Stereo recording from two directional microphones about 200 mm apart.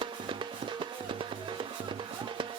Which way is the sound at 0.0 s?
25° right (ahead or behind).